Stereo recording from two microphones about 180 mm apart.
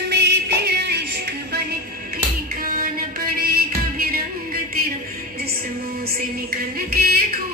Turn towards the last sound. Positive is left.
turn(degrees=-55)  # may be behind; listen again after turning